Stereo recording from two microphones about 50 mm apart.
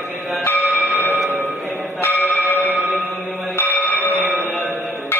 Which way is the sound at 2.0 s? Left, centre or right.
Left.